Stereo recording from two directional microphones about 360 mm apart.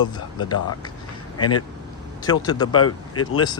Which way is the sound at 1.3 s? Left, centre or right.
Left.